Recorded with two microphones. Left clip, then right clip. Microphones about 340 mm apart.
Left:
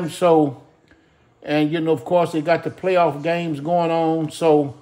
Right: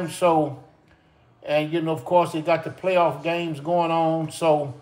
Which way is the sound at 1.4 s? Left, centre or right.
Left.